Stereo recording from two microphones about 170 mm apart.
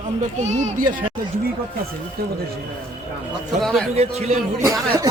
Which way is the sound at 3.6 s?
Centre (ahead or behind).